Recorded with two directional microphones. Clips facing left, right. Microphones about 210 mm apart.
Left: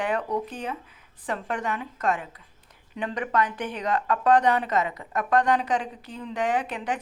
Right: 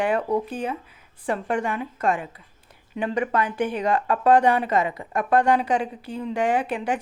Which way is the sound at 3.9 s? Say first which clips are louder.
Right 2 dB; 30° right (ahead or behind).